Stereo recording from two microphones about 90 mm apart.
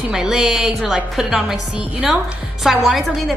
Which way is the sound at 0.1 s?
10° right (ahead or behind).